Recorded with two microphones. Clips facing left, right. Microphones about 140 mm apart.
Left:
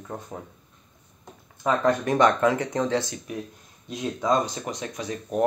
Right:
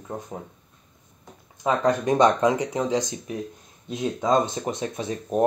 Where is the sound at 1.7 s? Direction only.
15° right (ahead or behind).